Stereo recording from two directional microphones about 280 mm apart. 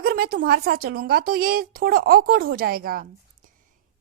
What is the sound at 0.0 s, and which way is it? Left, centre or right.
A woman's voice, right.